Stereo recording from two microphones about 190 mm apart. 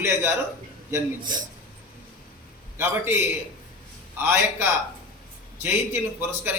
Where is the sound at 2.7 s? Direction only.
10° right (ahead or behind).